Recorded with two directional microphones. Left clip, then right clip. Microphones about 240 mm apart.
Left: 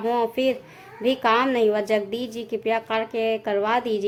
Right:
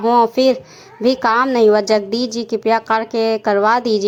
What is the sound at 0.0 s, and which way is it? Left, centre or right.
A woman's voice, right.